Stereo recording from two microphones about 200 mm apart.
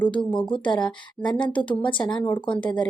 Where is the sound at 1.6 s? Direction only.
25° left (ahead or behind).